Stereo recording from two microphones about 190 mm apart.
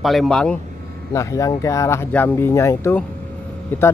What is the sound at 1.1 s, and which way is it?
Speech, 15° left (ahead or behind).